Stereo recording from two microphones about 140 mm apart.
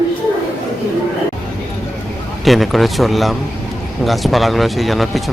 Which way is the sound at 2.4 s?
Centre (ahead or behind).